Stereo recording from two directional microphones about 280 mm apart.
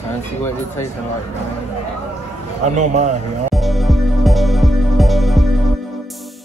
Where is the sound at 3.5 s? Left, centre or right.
Centre.